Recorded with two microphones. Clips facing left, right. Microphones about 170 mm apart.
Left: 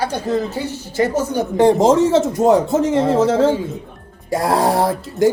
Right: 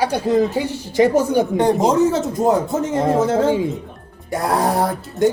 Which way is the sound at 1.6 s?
25° left (ahead or behind).